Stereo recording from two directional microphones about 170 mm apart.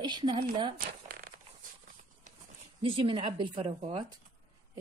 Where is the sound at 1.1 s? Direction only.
60° right (ahead or behind).